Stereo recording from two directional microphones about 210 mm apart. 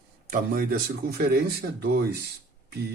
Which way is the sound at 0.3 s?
40° right (ahead or behind).